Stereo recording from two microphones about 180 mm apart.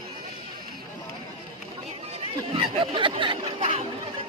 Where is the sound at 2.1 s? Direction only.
30° right (ahead or behind).